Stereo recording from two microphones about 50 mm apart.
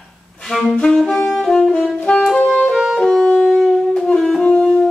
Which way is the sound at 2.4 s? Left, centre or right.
Centre.